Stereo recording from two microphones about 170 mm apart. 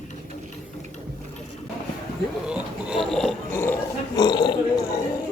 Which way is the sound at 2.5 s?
5° right (ahead or behind).